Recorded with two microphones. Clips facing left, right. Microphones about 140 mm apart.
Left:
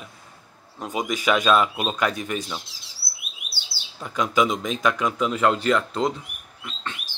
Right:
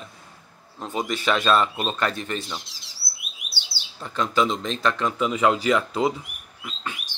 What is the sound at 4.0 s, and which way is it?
Speech, 10° left (ahead or behind).